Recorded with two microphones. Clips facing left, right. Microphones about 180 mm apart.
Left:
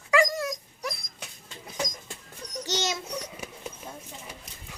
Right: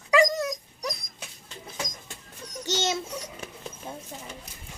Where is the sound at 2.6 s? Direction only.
25° right (ahead or behind).